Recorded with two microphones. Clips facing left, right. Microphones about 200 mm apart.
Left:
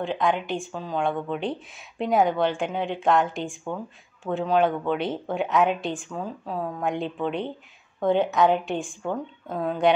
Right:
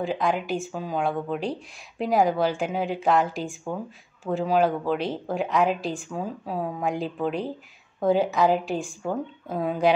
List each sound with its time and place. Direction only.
0.0 s speech: centre (ahead or behind)